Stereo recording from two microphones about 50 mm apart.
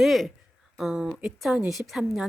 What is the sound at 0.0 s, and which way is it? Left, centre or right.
Speech, centre.